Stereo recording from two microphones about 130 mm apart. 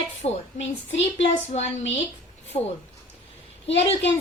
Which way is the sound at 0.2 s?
55° left (ahead or behind).